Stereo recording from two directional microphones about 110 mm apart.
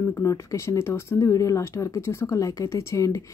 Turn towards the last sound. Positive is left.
turn(degrees=25)  # may be behind; listen again after turning